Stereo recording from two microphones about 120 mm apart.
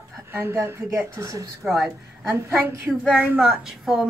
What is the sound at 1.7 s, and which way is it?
Speech, centre (ahead or behind).